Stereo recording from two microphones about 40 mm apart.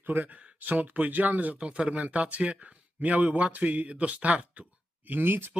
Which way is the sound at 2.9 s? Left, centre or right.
Right.